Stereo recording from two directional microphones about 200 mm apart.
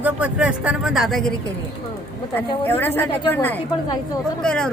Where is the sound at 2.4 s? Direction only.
10° left (ahead or behind).